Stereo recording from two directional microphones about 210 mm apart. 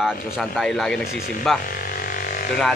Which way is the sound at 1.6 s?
40° left (ahead or behind).